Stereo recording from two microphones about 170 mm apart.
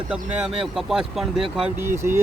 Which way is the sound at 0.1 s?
5° right (ahead or behind).